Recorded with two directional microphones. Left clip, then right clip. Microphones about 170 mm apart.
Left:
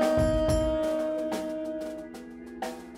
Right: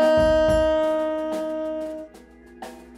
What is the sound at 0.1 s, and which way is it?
Music, 35° right (ahead or behind).